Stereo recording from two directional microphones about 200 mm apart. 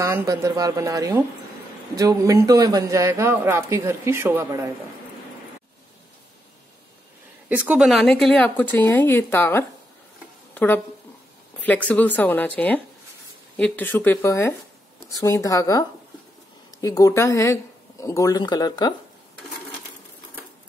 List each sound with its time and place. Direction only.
0.0 s a man's voice: 15° right (ahead or behind)
7.4 s speech: 10° right (ahead or behind); by 9.7 s 10° left (ahead or behind)
10.5 s a sound: 5° left (ahead or behind)
11.6 s speech: 5° left (ahead or behind)
16.8 s speech: 15° left (ahead or behind)